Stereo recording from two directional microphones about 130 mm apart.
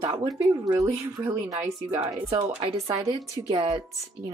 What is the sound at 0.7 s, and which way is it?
Speech, 25° right (ahead or behind).